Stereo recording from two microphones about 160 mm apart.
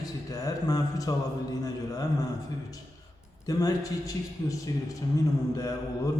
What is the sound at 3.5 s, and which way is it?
Speech, 20° left (ahead or behind).